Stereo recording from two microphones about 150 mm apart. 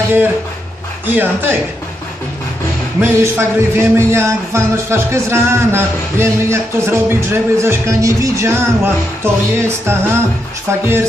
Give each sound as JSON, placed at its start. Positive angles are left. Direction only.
{"t": 1.0, "sound": "speech", "side_deg": -10}
{"t": 3.0, "sound": "speech", "side_deg": -15}